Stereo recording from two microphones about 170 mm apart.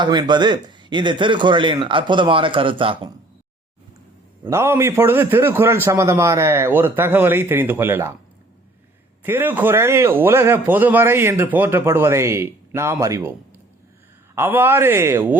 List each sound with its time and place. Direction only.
0.0 s a man's voice: 25° right (ahead or behind)
4.4 s a man's voice: 15° right (ahead or behind)
9.2 s a man's voice: 10° right (ahead or behind)
14.3 s a man's voice: 15° right (ahead or behind)